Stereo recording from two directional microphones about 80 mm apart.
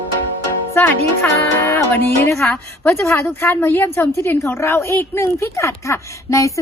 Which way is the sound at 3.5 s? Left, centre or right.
Left.